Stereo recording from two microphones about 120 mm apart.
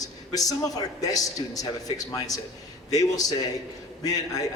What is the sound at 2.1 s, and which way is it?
A man's voice, 30° left (ahead or behind).